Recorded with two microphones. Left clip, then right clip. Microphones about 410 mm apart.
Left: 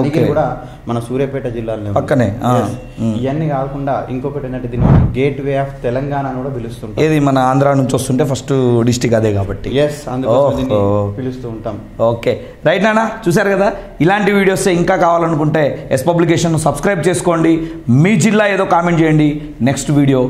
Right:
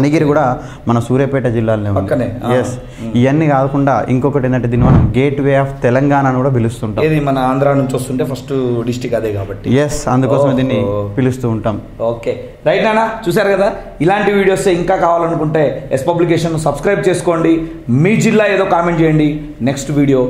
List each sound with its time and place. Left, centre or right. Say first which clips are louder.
0.0 s speech: right 2 dB; right
0.8 s a man's voice: right 4 dB; right
2.0 s a man's voice: left 2 dB; left
3.2 s speech: right 7 dB; right
5.1 s speech: right 3 dB; right
7.0 s a man's voice: left 1 dB; left
9.8 s a man's voice: right 1 dB; right
12.0 s a man's voice: left 4 dB; left
13.3 s a man's voice: even; centre